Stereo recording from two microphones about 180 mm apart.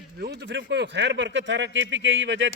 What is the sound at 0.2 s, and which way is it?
Speech, 70° right (ahead or behind).